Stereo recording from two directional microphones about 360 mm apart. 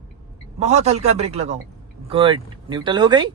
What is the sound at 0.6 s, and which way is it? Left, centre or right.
Speech, centre.